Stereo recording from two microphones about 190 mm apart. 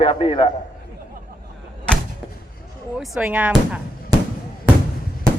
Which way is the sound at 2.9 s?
5° right (ahead or behind).